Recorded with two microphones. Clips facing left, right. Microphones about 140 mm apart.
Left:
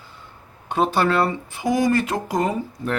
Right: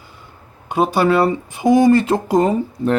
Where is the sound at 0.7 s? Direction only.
10° right (ahead or behind); by 3.0 s 25° right (ahead or behind).